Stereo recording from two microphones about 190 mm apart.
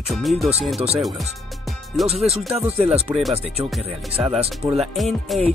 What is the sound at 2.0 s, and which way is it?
Speech, centre (ahead or behind).